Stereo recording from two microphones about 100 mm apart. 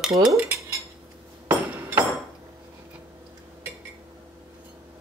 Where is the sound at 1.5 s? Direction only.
15° right (ahead or behind).